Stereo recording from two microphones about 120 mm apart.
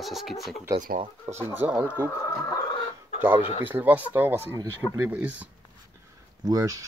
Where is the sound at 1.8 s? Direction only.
15° left (ahead or behind).